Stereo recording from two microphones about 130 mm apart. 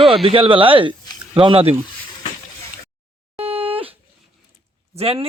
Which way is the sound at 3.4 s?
50° right (ahead or behind).